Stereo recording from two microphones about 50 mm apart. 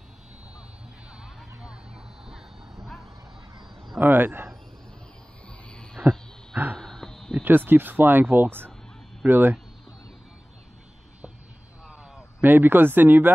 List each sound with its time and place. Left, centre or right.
1.2 s a sound: centre
2.2 s bow-wow: centre
4.0 s speech: right
6.0 s wild animals: right
6.8 s a sound: centre
7.4 s speech: right
12.4 s speech: right